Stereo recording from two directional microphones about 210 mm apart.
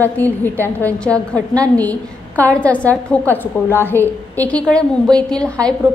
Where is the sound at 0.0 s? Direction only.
10° left (ahead or behind).